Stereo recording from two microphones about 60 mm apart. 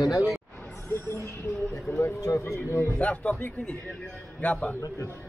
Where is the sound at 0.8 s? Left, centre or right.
Left.